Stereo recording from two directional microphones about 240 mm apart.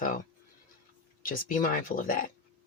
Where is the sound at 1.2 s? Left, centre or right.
Left.